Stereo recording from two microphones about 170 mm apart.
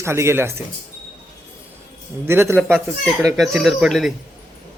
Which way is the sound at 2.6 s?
Centre (ahead or behind).